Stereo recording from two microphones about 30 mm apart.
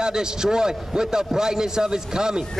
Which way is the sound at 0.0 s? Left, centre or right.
Right.